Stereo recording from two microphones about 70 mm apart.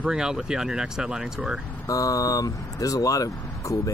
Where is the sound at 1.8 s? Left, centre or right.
Left.